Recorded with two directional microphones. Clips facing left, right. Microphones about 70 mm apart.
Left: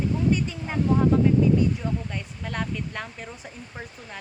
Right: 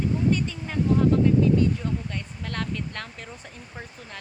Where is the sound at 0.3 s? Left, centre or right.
Centre.